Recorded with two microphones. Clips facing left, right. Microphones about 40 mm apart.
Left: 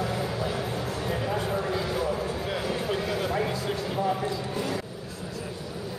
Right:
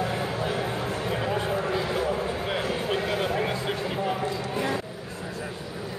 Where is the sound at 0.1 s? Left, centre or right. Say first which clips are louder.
Right 1 dB; right.